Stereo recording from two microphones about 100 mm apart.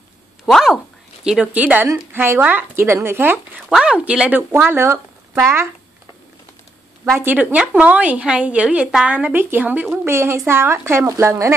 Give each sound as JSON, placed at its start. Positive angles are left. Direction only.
{"t": 0.5, "sound": "speech", "side_deg": 0}
{"t": 1.2, "sound": "a woman's voice", "side_deg": -10}
{"t": 3.7, "sound": "a woman's voice", "side_deg": -10}
{"t": 7.1, "sound": "a woman's voice", "side_deg": -20}